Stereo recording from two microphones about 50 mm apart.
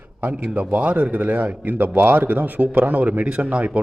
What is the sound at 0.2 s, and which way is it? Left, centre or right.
A man's voice, right.